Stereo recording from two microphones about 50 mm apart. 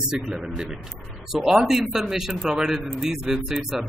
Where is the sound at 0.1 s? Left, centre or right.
Centre.